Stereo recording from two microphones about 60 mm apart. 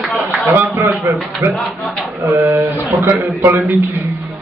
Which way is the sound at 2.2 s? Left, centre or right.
Right.